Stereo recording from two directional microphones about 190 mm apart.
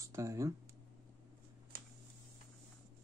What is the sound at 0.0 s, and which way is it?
Speech, 15° right (ahead or behind).